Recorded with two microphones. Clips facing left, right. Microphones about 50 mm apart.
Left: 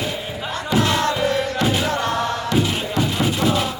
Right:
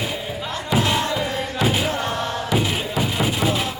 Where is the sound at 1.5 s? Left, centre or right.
Centre.